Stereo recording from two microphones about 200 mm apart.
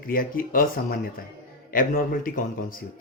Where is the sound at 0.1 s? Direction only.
45° left (ahead or behind).